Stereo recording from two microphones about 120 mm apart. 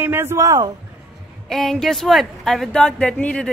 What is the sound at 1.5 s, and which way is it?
Speech, centre (ahead or behind).